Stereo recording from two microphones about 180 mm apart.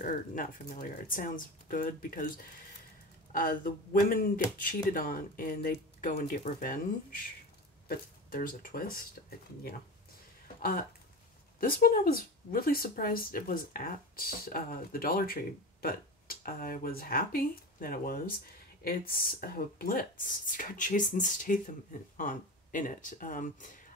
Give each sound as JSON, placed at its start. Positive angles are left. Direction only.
{"t": 0.0, "sound": "speech", "side_deg": 50}
{"t": 8.3, "sound": "speech", "side_deg": 50}
{"t": 10.6, "sound": "speech", "side_deg": 55}